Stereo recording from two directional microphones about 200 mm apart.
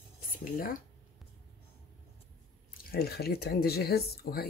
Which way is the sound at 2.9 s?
50° left (ahead or behind).